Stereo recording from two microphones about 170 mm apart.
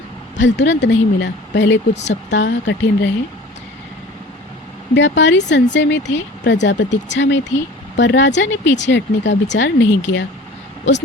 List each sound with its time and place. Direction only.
0.3 s speech: 90° left
4.9 s speech: 90° left